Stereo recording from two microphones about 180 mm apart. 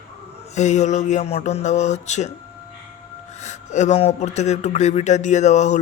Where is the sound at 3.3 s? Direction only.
40° left (ahead or behind).